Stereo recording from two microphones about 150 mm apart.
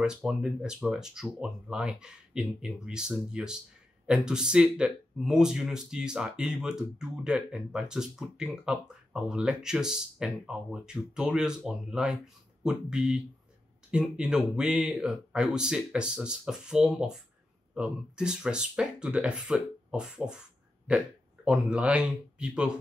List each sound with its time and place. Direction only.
0.0 s speech: 5° right (ahead or behind)
21.5 s speech: 10° right (ahead or behind)